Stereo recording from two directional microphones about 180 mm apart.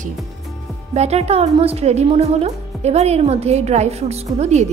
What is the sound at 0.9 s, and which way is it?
A woman's voice, 35° right (ahead or behind).